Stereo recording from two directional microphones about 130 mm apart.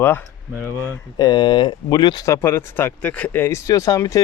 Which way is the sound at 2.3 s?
20° left (ahead or behind).